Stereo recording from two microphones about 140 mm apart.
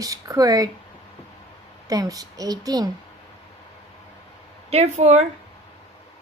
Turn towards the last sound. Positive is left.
turn(degrees=-50)  # may be behind; listen again after turning